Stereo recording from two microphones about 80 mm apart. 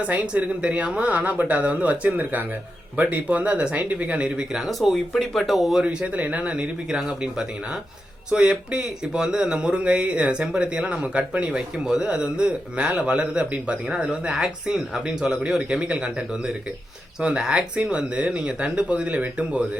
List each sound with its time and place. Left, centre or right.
0.0 s speech: centre
4.5 s speech: centre
5.8 s speech: centre
17.2 s speech: centre